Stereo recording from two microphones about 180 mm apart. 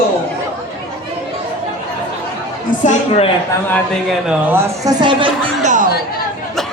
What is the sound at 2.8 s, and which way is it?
Speech, 35° left (ahead or behind).